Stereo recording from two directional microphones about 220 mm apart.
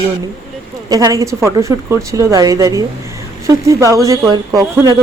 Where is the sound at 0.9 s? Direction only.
15° right (ahead or behind).